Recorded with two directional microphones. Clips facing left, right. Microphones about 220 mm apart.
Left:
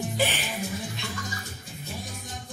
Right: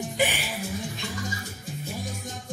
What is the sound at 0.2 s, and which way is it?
Music, 10° right (ahead or behind).